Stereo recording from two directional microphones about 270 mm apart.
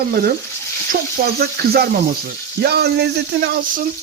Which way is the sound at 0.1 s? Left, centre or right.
Right.